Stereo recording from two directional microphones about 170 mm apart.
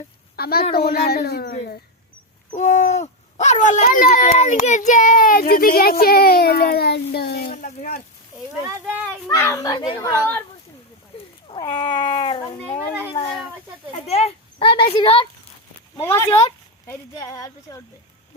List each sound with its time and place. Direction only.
0.3 s a woman's voice: 65° left (ahead or behind)
2.6 s a sound: 45° left (ahead or behind)
3.8 s a child's voice: 50° left (ahead or behind)
7.5 s a sound: 50° left (ahead or behind)
9.2 s speech: 15° left (ahead or behind)
10.1 s speech: 15° left (ahead or behind)
11.4 s cat: 25° left (ahead or behind)
14.1 s speech: 35° left (ahead or behind)
16.0 s speech: 15° left (ahead or behind)